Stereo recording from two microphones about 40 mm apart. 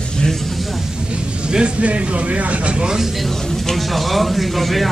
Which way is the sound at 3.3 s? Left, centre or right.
Centre.